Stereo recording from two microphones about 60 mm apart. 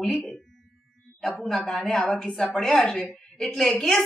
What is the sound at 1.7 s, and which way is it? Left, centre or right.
A woman's voice, centre.